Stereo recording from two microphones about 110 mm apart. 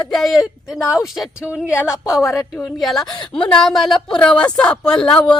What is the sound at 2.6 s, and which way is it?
A woman's voice, centre (ahead or behind).